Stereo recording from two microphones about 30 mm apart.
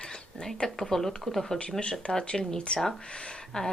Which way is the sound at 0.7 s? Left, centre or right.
Centre.